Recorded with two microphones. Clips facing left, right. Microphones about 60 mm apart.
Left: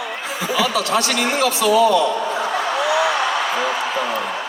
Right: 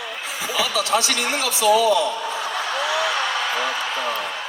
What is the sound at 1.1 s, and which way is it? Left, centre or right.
Speech, left.